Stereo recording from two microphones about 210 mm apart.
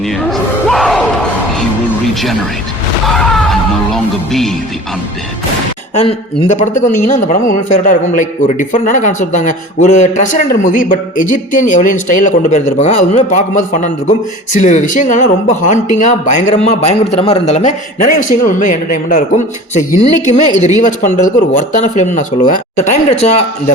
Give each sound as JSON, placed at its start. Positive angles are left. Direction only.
{"t": 0.3, "sound": "crowd", "side_deg": 0}
{"t": 3.1, "sound": "speech", "side_deg": 0}
{"t": 5.9, "sound": "a man's voice", "side_deg": 35}